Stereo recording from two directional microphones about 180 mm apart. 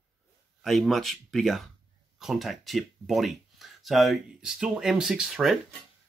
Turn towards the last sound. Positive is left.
turn(degrees=0)  # may be behind; listen again after turning